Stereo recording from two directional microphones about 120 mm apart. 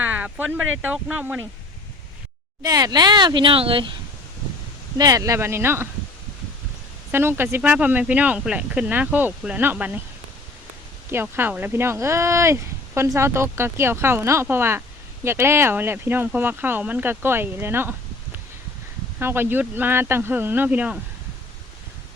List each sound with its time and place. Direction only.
0.0 s speech: 15° right (ahead or behind)
2.6 s speech: 30° right (ahead or behind); by 3.9 s 45° right (ahead or behind)
4.9 s speech: 30° right (ahead or behind)
7.1 s speech: 20° right (ahead or behind)
11.1 s speech: 20° right (ahead or behind)
19.2 s speech: 20° right (ahead or behind)